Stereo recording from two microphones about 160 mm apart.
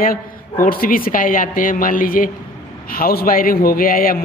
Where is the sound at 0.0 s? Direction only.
60° left (ahead or behind).